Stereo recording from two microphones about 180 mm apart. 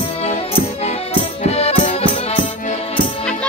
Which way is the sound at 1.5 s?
35° left (ahead or behind).